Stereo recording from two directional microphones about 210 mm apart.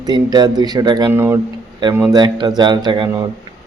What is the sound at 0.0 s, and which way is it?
Speech, 20° right (ahead or behind).